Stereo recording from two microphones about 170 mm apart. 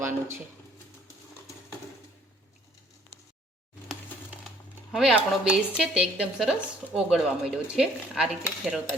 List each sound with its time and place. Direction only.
4.9 s speech: 5° right (ahead or behind)